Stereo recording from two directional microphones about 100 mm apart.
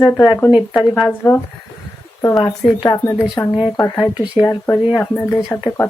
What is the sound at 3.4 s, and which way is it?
Speech, 30° left (ahead or behind).